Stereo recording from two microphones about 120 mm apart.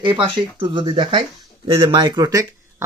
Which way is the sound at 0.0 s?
45° right (ahead or behind).